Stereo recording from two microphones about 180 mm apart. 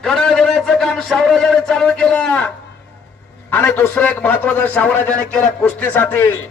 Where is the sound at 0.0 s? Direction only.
5° left (ahead or behind).